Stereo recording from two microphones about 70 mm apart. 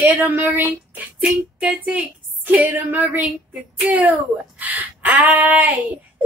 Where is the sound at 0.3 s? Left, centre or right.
Right.